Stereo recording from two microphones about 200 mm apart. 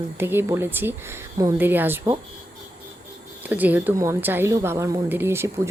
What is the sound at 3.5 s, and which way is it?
A woman's voice, 10° right (ahead or behind).